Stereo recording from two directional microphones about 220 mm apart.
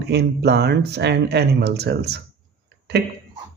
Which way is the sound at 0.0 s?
50° right (ahead or behind).